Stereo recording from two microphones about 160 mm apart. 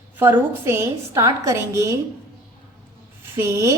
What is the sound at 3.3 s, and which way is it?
Speech, 20° right (ahead or behind).